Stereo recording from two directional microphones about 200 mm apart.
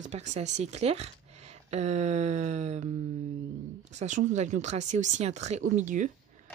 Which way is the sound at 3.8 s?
35° right (ahead or behind).